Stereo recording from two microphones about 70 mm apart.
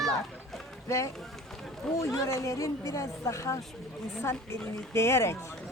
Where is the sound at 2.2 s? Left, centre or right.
Left.